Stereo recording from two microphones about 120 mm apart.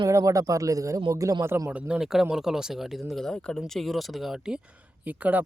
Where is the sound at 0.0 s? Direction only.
25° right (ahead or behind).